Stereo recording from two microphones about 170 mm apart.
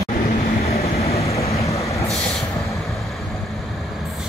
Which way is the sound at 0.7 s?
35° left (ahead or behind).